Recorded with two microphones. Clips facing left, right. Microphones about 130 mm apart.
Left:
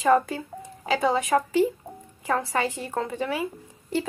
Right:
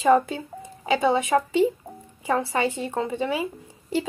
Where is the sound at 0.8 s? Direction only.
Centre (ahead or behind).